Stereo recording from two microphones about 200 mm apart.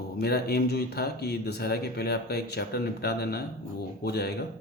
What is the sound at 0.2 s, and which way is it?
Speech, 50° left (ahead or behind).